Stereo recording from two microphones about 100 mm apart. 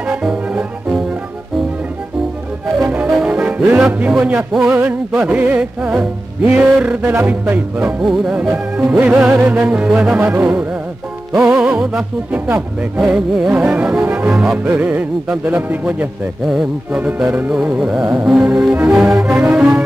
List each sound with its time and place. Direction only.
0.1 s music: 10° right (ahead or behind)
2.9 s music: 10° right (ahead or behind)
11.3 s speech: 5° right (ahead or behind)
11.6 s music: 5° right (ahead or behind)
12.5 s speech: 5° right (ahead or behind)
13.5 s music: 10° right (ahead or behind)
14.3 s speech: 5° right (ahead or behind)
14.7 s music: 15° right (ahead or behind)